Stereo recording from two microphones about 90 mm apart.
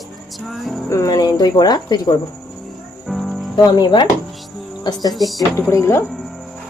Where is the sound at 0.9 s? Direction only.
40° left (ahead or behind).